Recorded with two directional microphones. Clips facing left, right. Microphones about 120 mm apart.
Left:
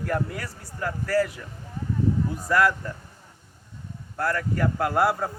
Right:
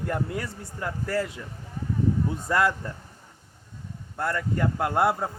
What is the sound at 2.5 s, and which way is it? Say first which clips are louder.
Speech: left 2 dB; 25° right (ahead or behind).